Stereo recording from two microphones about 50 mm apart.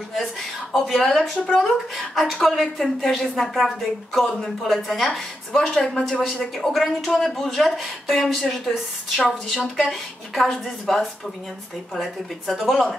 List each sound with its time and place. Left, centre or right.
0.1 s speech: centre
5.8 s speech: centre
6.7 s speech: centre